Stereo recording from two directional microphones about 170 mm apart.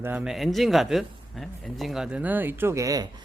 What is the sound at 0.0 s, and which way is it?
Speech, 10° right (ahead or behind).